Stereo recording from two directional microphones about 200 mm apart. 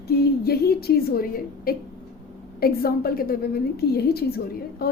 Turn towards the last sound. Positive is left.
turn(degrees=50)  # may be behind; listen again after turning